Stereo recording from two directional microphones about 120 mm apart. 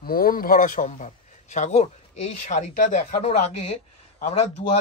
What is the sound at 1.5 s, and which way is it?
Speech, 75° left (ahead or behind).